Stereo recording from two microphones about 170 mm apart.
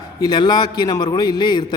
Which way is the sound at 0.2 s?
25° left (ahead or behind).